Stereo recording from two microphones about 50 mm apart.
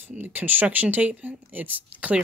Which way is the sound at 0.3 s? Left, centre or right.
Right.